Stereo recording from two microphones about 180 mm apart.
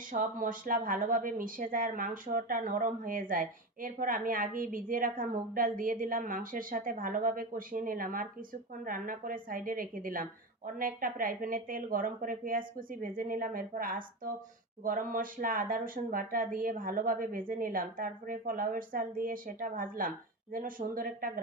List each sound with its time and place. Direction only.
0.1 s speech: 50° right (ahead or behind)